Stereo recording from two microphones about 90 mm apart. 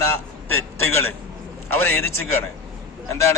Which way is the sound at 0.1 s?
25° left (ahead or behind).